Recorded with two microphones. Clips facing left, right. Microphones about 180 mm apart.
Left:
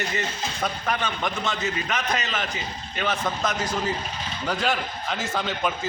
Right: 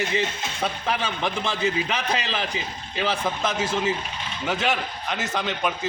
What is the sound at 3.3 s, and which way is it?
Speech, 5° right (ahead or behind).